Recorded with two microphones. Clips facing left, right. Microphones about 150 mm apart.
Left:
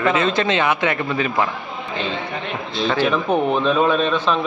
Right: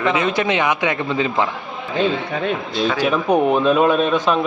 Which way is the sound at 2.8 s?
5° right (ahead or behind).